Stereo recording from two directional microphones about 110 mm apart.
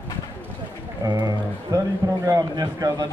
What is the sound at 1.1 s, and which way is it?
Speech, 40° right (ahead or behind).